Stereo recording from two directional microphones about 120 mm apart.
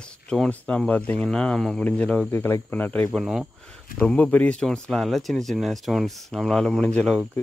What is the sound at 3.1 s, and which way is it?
Speech, centre (ahead or behind).